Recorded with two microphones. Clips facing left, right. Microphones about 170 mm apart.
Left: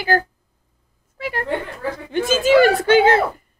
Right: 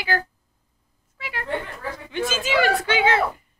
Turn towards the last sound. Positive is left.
turn(degrees=45)  # may be behind; listen again after turning